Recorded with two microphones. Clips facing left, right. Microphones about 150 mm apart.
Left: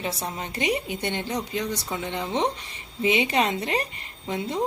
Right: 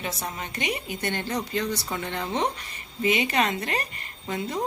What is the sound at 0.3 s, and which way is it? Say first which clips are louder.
A woman's voice: left 6 dB; 30° left (ahead or behind).